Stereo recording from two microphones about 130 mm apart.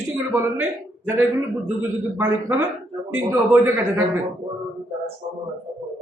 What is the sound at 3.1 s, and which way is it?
Speech, 20° right (ahead or behind).